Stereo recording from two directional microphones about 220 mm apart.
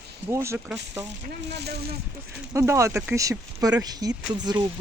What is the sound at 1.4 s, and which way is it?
Speech, 50° right (ahead or behind).